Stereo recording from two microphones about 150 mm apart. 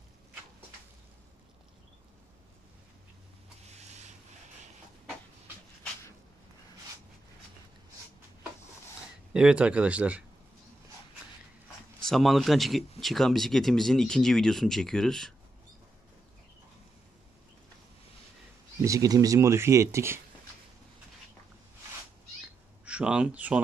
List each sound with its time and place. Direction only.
9.3 s speech: 5° right (ahead or behind)
12.0 s speech: centre (ahead or behind)
18.8 s speech: 20° right (ahead or behind)
22.8 s speech: 10° right (ahead or behind)